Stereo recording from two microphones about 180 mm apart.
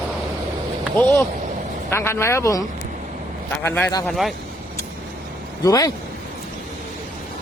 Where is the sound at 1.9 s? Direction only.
15° left (ahead or behind).